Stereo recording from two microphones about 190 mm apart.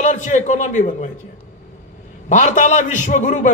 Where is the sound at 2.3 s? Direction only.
40° left (ahead or behind).